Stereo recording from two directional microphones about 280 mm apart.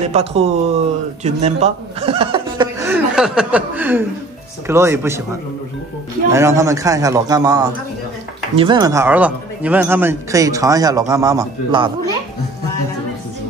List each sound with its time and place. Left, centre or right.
0.0 s a man's voice: right
6.3 s a man's voice: centre